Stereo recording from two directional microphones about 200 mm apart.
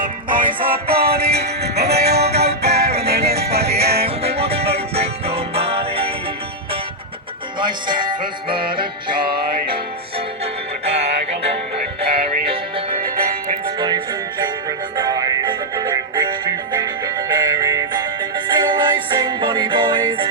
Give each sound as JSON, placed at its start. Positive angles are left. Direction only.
{"t": 0.0, "sound": "music", "side_deg": -45}
{"t": 4.0, "sound": "music", "side_deg": -30}
{"t": 7.6, "sound": "music", "side_deg": -25}
{"t": 13.7, "sound": "music", "side_deg": -20}